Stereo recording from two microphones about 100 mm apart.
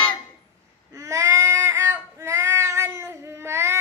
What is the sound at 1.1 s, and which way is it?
Child singing, 30° right (ahead or behind).